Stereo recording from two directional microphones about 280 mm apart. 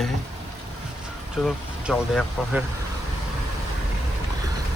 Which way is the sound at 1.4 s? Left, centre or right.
Centre.